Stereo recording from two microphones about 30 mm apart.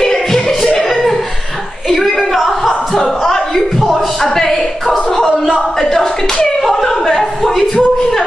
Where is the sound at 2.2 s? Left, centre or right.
Centre.